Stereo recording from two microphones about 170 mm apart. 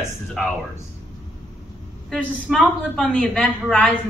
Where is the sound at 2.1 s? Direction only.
Centre (ahead or behind).